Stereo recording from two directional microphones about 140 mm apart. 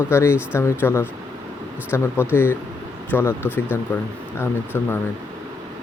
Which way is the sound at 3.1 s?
15° left (ahead or behind).